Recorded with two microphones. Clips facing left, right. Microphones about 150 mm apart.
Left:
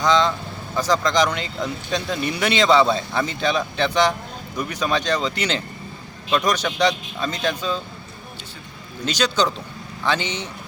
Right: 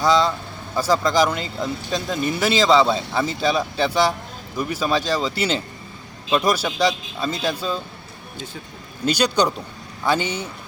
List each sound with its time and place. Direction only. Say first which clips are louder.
0.0 s speech: right 1 dB; 5° right (ahead or behind)
9.0 s speech: right 2 dB; 10° right (ahead or behind)